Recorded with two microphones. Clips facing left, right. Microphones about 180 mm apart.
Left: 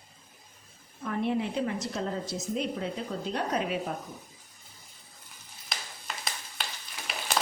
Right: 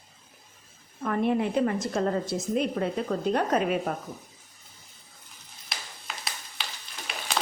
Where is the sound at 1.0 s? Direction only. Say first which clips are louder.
Right 4 dB; 55° right (ahead or behind).